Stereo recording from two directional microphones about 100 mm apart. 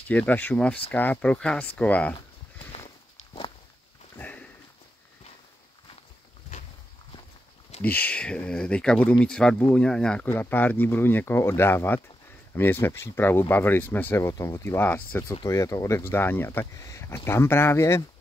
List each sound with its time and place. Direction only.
0.1 s speech: 15° left (ahead or behind)
4.2 s sniff: 15° left (ahead or behind)
7.8 s speech: 15° left (ahead or behind)
10.2 s speech: 20° left (ahead or behind)
15.4 s speech: 30° left (ahead or behind)